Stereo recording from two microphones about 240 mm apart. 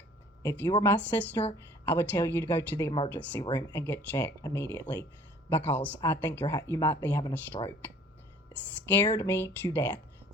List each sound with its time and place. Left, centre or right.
0.4 s speech: centre
9.0 s speech: centre